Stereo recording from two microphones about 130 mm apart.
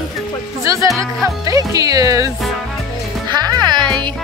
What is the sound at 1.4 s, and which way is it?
Speech, 25° right (ahead or behind).